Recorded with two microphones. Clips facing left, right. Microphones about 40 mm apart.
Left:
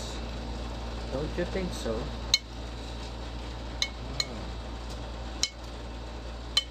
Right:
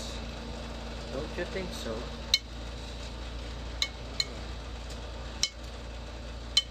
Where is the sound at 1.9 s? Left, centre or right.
Centre.